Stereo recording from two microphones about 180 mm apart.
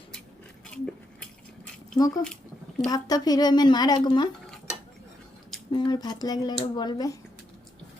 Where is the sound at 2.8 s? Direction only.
20° left (ahead or behind).